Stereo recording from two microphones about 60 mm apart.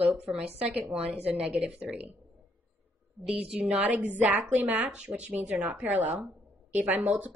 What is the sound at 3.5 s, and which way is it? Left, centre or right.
Speech, centre.